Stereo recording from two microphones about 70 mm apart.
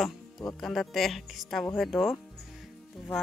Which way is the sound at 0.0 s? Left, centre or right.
Centre.